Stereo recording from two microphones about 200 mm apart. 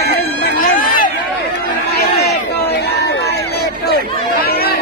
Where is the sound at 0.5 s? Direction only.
45° left (ahead or behind).